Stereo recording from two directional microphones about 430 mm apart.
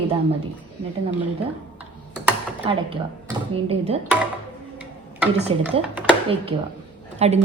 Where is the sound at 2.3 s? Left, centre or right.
Centre.